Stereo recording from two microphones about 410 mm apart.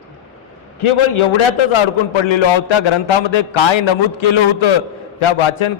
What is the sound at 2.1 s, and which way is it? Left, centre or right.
A man's voice, left.